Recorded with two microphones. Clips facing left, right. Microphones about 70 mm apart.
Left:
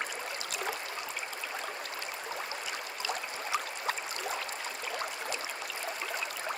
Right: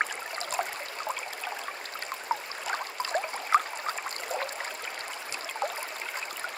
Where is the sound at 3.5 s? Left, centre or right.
Right.